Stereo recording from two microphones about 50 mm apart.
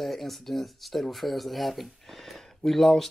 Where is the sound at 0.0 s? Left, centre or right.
Centre.